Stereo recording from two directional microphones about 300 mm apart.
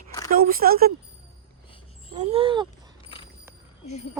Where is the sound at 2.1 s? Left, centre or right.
Centre.